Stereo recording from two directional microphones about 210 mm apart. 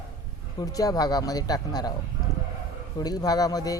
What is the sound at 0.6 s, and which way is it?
A man's voice, 15° left (ahead or behind).